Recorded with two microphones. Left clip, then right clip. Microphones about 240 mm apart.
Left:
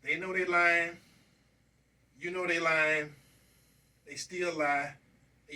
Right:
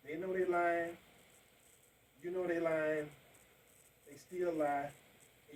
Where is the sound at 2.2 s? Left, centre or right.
Left.